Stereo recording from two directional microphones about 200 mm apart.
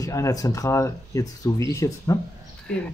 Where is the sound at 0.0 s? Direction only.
15° left (ahead or behind).